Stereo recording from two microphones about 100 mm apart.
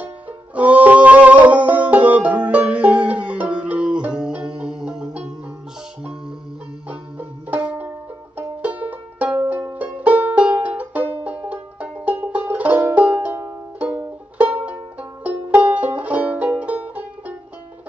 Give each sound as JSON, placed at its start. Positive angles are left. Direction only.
{"t": 0.6, "sound": "music", "side_deg": -15}
{"t": 6.9, "sound": "music", "side_deg": -15}